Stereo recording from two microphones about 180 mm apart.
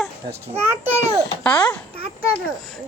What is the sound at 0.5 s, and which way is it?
Speech, 15° right (ahead or behind).